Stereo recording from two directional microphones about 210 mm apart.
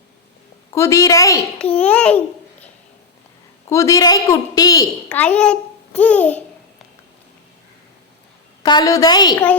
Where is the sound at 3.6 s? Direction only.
15° left (ahead or behind).